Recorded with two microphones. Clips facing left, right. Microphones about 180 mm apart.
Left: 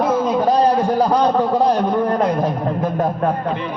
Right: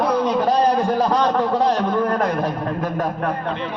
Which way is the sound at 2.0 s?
20° left (ahead or behind).